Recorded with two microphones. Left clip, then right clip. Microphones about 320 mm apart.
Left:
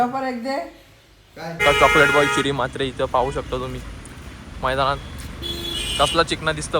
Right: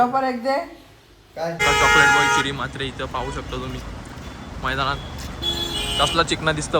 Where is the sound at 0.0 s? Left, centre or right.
Centre.